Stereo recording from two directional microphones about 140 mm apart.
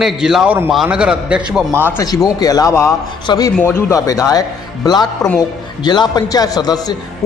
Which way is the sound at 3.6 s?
20° left (ahead or behind).